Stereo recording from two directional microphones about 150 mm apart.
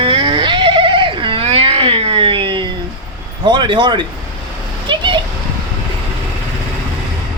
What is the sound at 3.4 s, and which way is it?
Speech, 30° right (ahead or behind).